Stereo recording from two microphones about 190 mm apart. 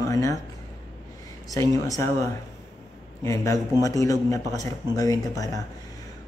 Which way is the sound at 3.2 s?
15° left (ahead or behind).